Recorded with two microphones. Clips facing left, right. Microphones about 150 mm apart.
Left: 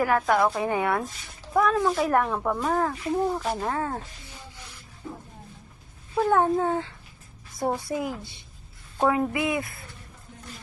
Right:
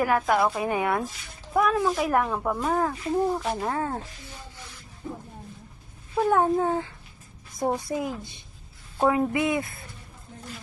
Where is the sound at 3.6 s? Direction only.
20° right (ahead or behind).